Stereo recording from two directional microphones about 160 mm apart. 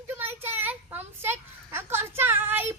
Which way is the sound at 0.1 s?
15° right (ahead or behind).